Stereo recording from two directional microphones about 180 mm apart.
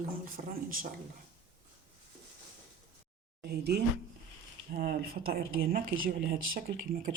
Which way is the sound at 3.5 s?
65° right (ahead or behind).